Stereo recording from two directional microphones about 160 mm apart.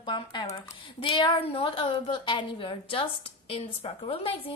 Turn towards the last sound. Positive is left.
turn(degrees=35)  # may be behind; listen again after turning